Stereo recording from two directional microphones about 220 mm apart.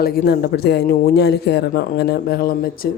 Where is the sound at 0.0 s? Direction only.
45° left (ahead or behind).